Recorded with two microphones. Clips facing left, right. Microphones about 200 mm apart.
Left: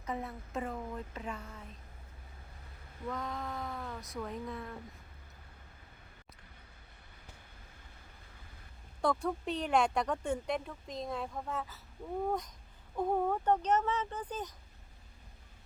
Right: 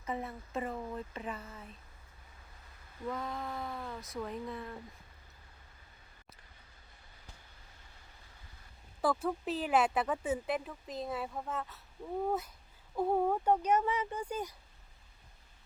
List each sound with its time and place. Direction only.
0.0 s speech: centre (ahead or behind)
3.1 s speech: 5° right (ahead or behind)
9.0 s speech: 5° right (ahead or behind)